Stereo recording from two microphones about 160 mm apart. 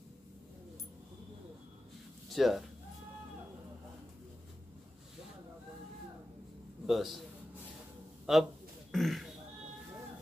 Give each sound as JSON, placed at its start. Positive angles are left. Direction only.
{"t": 2.2, "sound": "speech", "side_deg": 0}
{"t": 6.9, "sound": "a man's voice", "side_deg": 0}
{"t": 8.3, "sound": "a man's voice", "side_deg": 0}